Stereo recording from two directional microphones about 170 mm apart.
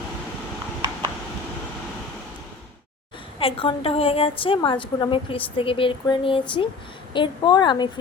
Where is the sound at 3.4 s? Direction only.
30° left (ahead or behind).